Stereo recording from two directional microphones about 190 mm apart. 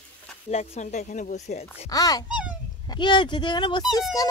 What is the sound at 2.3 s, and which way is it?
Babbling, 5° right (ahead or behind).